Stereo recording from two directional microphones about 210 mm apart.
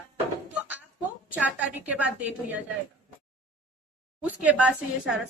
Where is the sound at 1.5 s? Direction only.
5° right (ahead or behind).